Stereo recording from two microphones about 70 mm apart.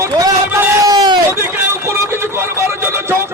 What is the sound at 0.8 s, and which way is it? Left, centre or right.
Speech, right.